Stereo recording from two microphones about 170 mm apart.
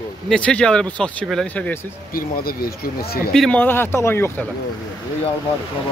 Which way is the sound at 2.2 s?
60° left (ahead or behind).